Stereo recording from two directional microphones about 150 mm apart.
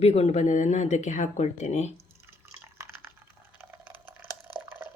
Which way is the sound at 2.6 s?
15° right (ahead or behind).